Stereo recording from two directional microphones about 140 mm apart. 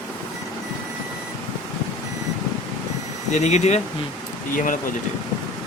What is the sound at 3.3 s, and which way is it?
Speech, 55° left (ahead or behind).